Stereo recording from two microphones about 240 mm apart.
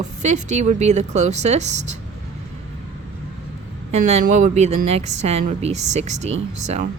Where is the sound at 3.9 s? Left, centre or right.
Right.